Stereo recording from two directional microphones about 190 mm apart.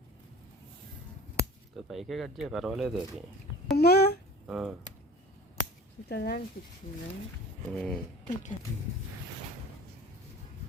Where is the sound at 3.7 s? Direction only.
60° left (ahead or behind).